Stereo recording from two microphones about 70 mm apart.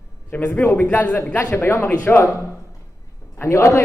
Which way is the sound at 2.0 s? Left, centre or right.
Left.